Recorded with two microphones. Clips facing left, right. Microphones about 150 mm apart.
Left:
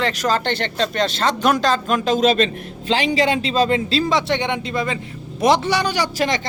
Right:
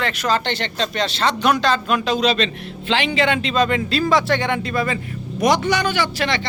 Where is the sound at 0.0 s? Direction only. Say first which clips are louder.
Left 1 dB; 40° left (ahead or behind).